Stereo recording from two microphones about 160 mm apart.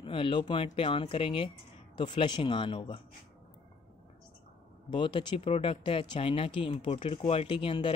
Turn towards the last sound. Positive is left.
turn(degrees=30)  # may be behind; listen again after turning